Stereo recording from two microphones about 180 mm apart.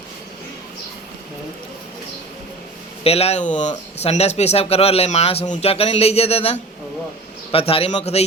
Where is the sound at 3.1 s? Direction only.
35° left (ahead or behind).